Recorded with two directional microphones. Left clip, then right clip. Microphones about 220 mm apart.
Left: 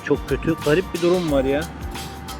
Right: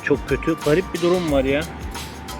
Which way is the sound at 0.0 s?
Centre (ahead or behind).